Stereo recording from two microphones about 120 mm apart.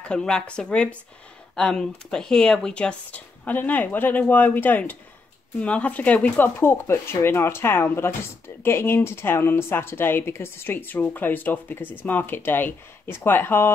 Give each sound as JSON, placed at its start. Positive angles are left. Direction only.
{"t": 0.0, "sound": "speech", "side_deg": 5}